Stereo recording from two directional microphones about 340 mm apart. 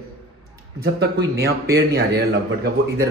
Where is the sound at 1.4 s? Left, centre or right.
Right.